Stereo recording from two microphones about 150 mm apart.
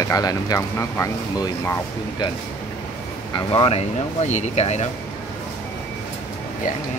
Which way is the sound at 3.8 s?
50° left (ahead or behind).